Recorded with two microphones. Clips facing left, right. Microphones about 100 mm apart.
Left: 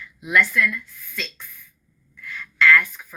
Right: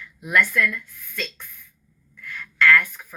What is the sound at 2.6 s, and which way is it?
Speech, 50° right (ahead or behind).